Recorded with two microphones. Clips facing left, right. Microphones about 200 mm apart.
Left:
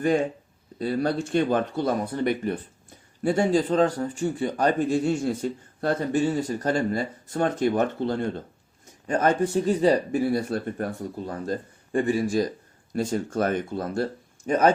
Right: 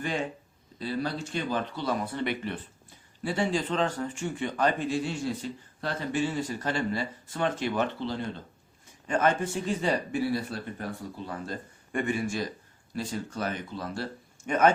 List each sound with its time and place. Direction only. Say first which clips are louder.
0.0 s speech: left 9 dB; 40° left (ahead or behind)
9.0 s speech: left 4 dB; 35° left (ahead or behind)
11.3 s speech: left 8 dB; 35° left (ahead or behind)
12.9 s speech: left 8 dB; 45° left (ahead or behind)